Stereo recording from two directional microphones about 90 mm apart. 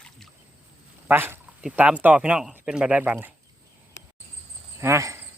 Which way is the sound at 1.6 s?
10° right (ahead or behind).